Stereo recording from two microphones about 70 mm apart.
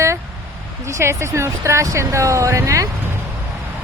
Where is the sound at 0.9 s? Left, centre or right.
Right.